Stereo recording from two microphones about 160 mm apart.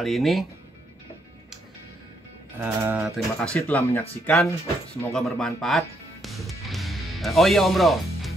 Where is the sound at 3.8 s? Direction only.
15° left (ahead or behind).